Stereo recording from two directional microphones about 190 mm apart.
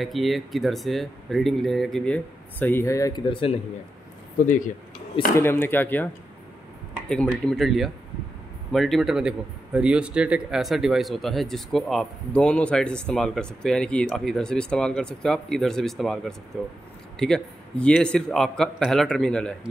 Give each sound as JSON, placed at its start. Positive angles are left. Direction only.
{"t": 0.0, "sound": "speech", "side_deg": 0}
{"t": 4.4, "sound": "speech", "side_deg": 40}
{"t": 5.3, "sound": "speech", "side_deg": 10}
{"t": 7.1, "sound": "speech", "side_deg": 5}